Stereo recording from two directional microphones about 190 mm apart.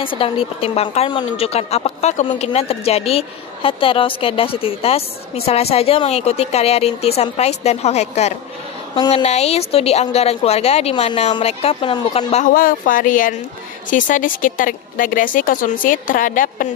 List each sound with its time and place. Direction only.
0.0 s a woman's voice: 30° left (ahead or behind); by 16.6 s 45° left (ahead or behind)